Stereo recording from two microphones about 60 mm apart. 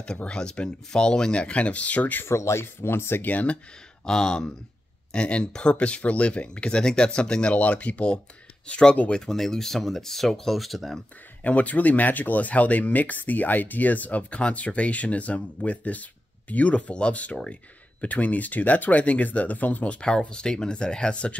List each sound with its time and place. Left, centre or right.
0.0 s speech: centre
2.2 s speech: left
3.3 s speech: left
4.0 s speech: centre
11.4 s speech: left